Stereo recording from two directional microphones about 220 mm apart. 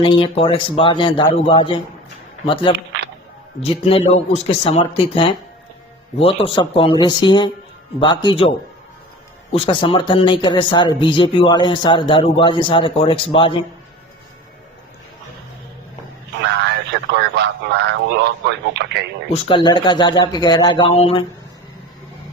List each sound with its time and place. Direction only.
0.0 s speech: 25° left (ahead or behind)
16.4 s a sound: 50° right (ahead or behind)
18.4 s speech: 50° right (ahead or behind)
19.3 s speech: 25° left (ahead or behind)